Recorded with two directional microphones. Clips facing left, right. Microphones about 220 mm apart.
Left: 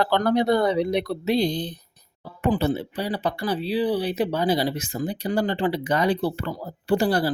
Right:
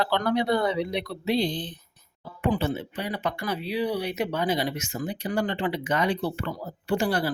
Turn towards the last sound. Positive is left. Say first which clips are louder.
# left 4 dB
turn(degrees=35)  # may be behind; listen again after turning